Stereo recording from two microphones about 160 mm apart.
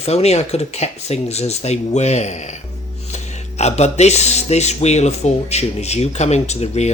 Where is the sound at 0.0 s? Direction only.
40° left (ahead or behind).